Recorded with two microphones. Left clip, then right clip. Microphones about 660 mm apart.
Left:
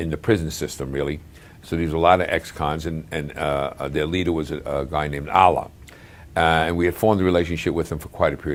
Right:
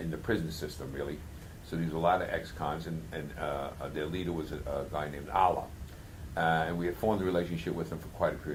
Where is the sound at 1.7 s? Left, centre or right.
Left.